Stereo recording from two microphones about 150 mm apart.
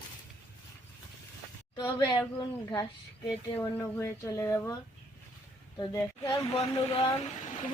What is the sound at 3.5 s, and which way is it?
Speech, 15° left (ahead or behind).